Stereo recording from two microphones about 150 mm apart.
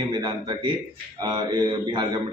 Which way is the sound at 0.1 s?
30° right (ahead or behind).